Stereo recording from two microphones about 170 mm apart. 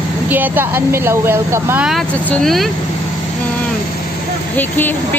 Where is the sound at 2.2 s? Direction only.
Centre (ahead or behind).